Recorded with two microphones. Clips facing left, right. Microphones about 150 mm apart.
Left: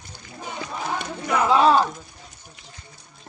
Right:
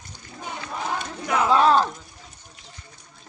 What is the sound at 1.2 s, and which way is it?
Speech, centre (ahead or behind).